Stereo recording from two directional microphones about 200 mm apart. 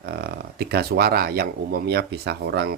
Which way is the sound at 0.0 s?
55° right (ahead or behind).